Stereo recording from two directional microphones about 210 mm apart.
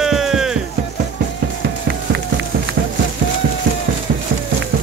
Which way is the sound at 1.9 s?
55° right (ahead or behind).